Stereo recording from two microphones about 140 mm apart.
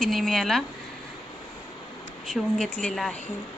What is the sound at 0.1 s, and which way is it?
Speech, centre (ahead or behind).